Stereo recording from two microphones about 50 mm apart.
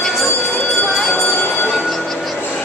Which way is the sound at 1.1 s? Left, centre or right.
Left.